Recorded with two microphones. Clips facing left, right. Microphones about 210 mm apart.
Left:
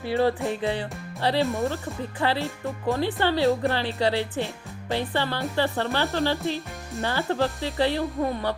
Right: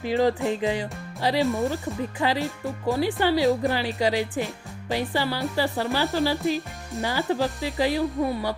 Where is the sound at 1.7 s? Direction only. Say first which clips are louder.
Right 3 dB; 15° right (ahead or behind).